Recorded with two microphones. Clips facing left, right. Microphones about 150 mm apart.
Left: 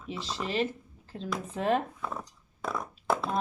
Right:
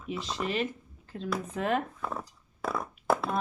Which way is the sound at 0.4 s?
35° left (ahead or behind).